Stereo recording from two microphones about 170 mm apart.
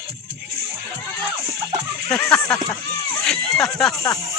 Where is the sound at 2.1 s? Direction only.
5° left (ahead or behind).